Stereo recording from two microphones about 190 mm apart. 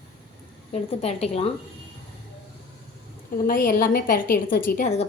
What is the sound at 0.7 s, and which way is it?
Speech, 35° left (ahead or behind).